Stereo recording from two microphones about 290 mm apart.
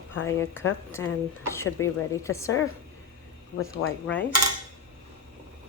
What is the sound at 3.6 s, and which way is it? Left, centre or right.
Speech, left.